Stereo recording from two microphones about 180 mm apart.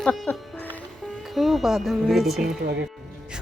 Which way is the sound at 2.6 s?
65° right (ahead or behind).